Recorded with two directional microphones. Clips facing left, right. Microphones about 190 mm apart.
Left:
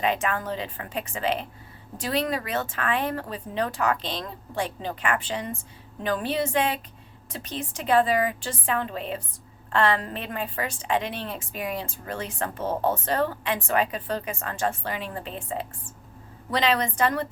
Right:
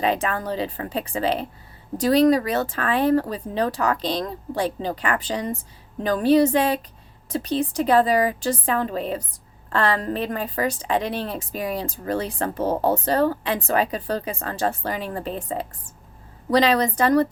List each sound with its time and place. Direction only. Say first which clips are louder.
0.0 s a woman's voice: right 3 dB; 35° right (ahead or behind)